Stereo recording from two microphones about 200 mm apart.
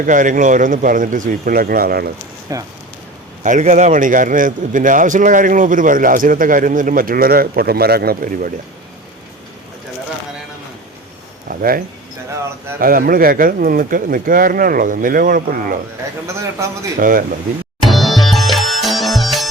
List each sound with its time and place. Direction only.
0.0 s speech: 40° right (ahead or behind)
2.5 s speech: 15° right (ahead or behind)
3.4 s a man's voice: 40° right (ahead or behind)
11.4 s a sound: 45° right (ahead or behind)
12.8 s a man's voice: 45° right (ahead or behind)
17.0 s a man's voice: 45° right (ahead or behind)
17.8 s music: centre (ahead or behind)